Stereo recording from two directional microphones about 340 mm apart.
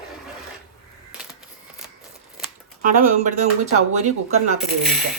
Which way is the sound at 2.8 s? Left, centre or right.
Right.